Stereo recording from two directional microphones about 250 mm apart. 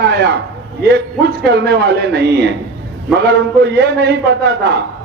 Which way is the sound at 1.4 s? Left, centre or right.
Right.